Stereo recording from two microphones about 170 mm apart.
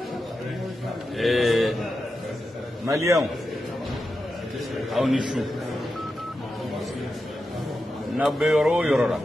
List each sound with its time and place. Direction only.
1.1 s a sound: centre (ahead or behind)
2.9 s a man's voice: 15° right (ahead or behind)
4.9 s speech: 5° right (ahead or behind)
8.2 s speech: centre (ahead or behind)